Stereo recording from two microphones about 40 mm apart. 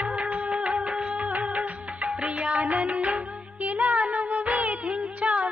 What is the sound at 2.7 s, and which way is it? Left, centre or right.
Music, right.